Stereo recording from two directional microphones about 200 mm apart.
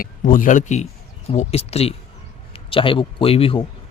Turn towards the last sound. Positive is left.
turn(degrees=25)  # may be behind; listen again after turning